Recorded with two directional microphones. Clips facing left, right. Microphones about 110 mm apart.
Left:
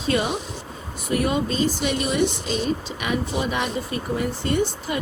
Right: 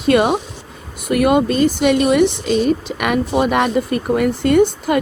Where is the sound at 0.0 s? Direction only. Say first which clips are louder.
Right 9 dB; 70° right (ahead or behind).